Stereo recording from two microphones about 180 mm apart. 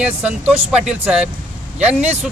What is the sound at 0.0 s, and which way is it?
Speech, 5° right (ahead or behind).